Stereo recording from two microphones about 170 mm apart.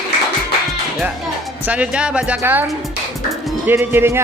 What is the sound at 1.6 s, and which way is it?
Speech, 10° right (ahead or behind).